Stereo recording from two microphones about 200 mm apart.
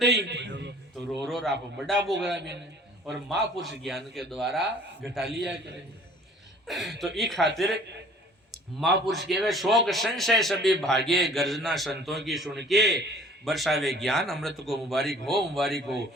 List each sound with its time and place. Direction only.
0.0 s a sound: 60° right (ahead or behind)
1.1 s a man's voice: centre (ahead or behind)
3.1 s a man's voice: centre (ahead or behind)
6.7 s a man's voice: centre (ahead or behind)
8.8 s a man's voice: centre (ahead or behind)